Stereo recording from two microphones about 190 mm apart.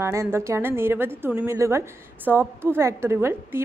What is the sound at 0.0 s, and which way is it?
A woman's voice, 15° right (ahead or behind).